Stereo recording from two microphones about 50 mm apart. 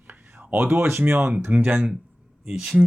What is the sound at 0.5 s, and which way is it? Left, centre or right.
Speech, right.